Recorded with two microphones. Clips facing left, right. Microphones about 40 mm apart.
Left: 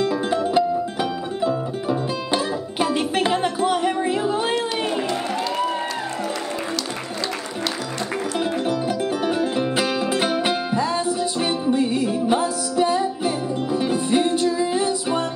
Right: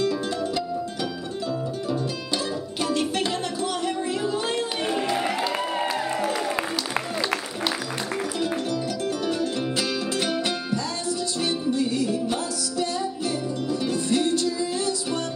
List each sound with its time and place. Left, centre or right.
0.0 s music: left
5.6 s music: centre
8.4 s music: left